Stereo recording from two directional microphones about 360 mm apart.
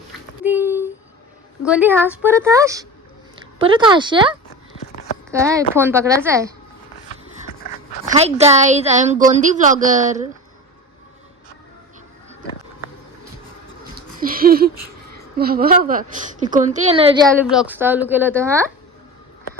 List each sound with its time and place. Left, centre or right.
0.4 s a sound: centre
1.6 s a woman's voice: centre
8.0 s a woman's voice: centre
14.2 s a sound: right
15.4 s a woman's voice: right
17.5 s speech: centre